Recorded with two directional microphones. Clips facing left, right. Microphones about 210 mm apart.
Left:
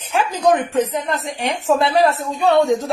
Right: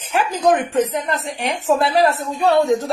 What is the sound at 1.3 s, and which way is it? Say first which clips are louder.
Speech: left 1 dB; 30° left (ahead or behind).